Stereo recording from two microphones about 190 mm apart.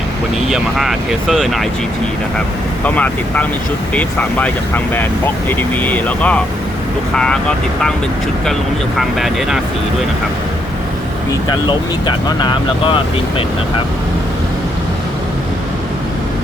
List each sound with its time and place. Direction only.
0.4 s speech: centre (ahead or behind)
2.8 s speech: 5° left (ahead or behind)
9.0 s speech: centre (ahead or behind)
11.4 s speech: 25° left (ahead or behind)